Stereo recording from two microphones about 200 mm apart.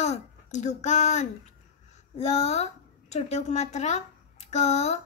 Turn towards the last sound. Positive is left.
turn(degrees=35)  # may be behind; listen again after turning